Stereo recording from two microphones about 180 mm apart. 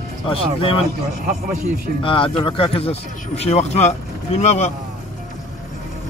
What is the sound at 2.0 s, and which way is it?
Speech, 30° left (ahead or behind).